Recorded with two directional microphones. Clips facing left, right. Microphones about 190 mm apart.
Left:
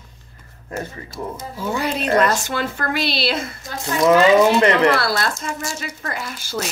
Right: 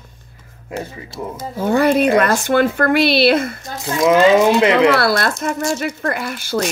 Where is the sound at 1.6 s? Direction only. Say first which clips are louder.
Right 10 dB; 55° right (ahead or behind).